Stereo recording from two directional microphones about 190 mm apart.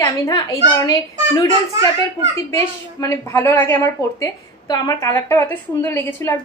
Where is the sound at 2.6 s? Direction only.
15° left (ahead or behind).